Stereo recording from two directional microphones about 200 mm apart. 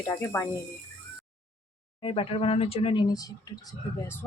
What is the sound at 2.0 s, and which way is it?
Speech, 25° left (ahead or behind).